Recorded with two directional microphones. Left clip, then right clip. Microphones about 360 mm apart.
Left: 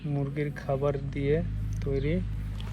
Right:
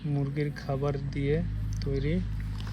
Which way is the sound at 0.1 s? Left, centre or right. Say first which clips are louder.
Even; centre.